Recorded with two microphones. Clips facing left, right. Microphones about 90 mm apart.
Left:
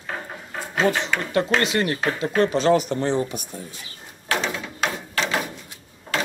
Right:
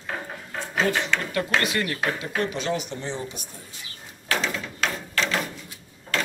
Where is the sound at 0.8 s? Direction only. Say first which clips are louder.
Left 4 dB; 20° left (ahead or behind).